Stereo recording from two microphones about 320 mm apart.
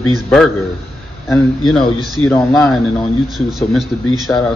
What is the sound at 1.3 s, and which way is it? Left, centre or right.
A man's voice, centre.